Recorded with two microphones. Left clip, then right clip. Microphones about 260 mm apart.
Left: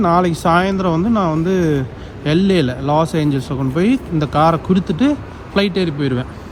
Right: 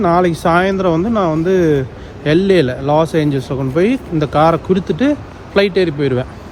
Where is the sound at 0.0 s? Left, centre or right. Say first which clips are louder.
Right 2 dB; left.